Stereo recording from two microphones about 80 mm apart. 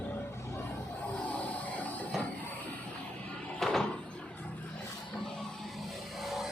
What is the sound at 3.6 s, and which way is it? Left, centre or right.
Door, centre.